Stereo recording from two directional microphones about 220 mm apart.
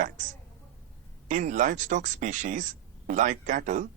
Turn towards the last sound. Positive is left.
turn(degrees=-35)  # may be behind; listen again after turning